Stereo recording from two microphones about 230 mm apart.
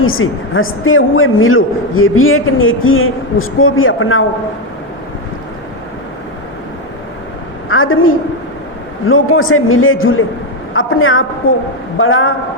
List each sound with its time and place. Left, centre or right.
0.0 s a woman's voice: left
7.7 s a woman's voice: left